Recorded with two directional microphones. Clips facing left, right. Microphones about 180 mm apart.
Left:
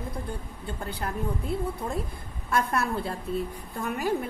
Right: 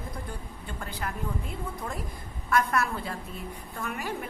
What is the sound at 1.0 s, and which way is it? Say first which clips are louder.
A woman's voice: left 2 dB; 35° left (ahead or behind).